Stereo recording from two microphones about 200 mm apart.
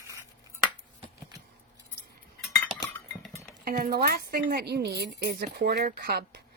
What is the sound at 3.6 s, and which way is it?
Speech, 45° right (ahead or behind).